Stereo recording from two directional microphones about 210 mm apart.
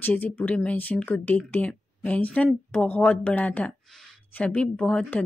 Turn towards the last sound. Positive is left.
turn(degrees=5)  # may be behind; listen again after turning